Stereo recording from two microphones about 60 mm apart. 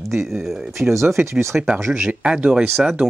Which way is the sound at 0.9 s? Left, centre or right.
Right.